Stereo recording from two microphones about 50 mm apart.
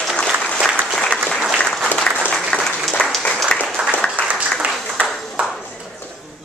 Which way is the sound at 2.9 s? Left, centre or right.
Centre.